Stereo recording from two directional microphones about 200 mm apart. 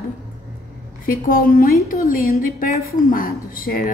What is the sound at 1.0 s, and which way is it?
A woman's voice, 45° left (ahead or behind).